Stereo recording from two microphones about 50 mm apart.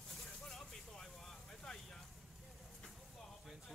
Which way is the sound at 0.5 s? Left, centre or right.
Centre.